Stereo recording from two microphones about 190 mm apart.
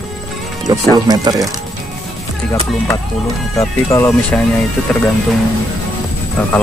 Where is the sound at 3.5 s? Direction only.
15° left (ahead or behind).